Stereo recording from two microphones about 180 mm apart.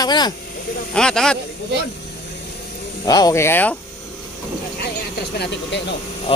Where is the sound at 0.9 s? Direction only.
5° left (ahead or behind).